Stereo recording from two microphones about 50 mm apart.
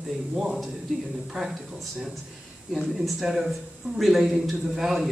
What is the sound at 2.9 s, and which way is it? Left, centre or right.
A man's voice, centre.